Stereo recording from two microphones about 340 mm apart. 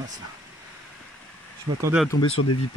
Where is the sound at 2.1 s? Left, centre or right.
Centre.